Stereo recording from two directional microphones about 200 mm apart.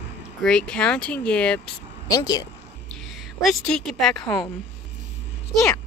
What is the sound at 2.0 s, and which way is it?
Speech, 20° left (ahead or behind).